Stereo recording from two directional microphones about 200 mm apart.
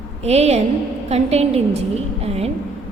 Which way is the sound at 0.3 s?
30° right (ahead or behind).